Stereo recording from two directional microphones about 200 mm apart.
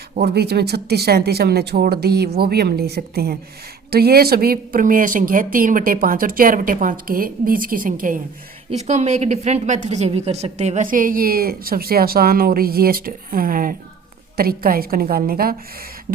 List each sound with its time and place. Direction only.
0.2 s a woman's voice: 55° right (ahead or behind)